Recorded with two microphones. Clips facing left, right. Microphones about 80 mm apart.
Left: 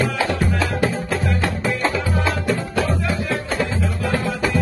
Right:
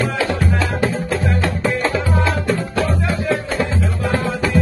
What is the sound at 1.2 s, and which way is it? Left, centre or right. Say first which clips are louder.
Music: right 3 dB; right.